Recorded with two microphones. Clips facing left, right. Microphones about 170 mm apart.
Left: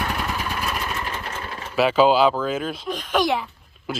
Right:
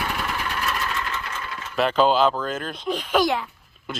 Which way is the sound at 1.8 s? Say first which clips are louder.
Left 2 dB; 5° left (ahead or behind).